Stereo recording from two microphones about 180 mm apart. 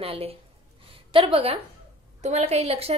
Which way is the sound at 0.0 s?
30° right (ahead or behind).